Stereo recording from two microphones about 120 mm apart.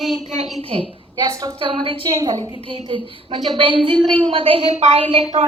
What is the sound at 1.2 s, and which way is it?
Speech, 30° right (ahead or behind).